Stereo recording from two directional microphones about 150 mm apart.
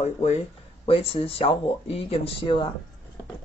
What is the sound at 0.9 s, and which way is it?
Speech, 35° left (ahead or behind).